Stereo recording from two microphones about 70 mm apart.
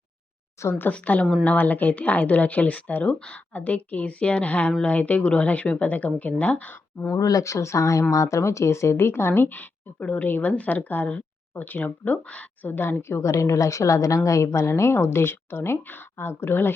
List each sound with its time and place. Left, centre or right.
0.6 s a woman's voice: left
0.9 s speech: left
7.1 s a woman's voice: left